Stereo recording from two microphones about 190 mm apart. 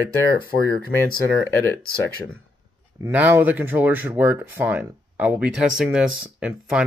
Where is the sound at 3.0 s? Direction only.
10° right (ahead or behind).